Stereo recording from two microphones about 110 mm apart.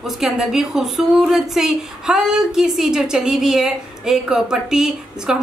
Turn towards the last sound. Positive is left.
turn(degrees=-5)  # may be behind; listen again after turning